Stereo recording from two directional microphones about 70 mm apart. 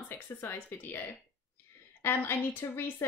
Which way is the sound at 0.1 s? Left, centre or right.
Left.